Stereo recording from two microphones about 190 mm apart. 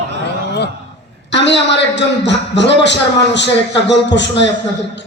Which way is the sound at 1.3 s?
70° left (ahead or behind).